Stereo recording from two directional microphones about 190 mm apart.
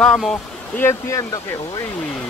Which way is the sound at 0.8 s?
15° left (ahead or behind).